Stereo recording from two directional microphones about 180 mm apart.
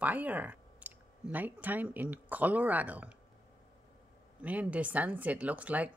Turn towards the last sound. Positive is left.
turn(degrees=-10)  # may be behind; listen again after turning